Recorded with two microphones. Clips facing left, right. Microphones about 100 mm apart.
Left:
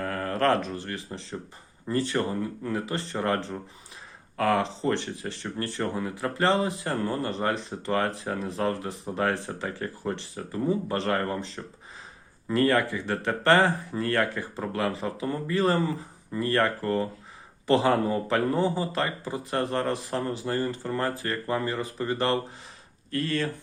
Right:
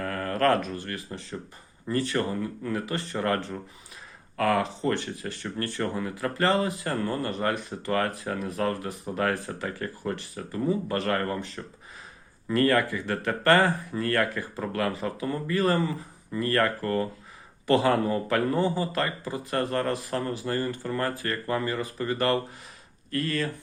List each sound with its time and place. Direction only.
0.0 s speech: 25° left (ahead or behind)